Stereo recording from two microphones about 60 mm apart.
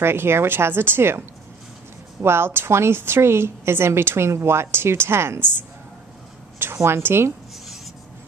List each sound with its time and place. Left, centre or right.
0.0 s a woman's voice: right
2.2 s a woman's voice: right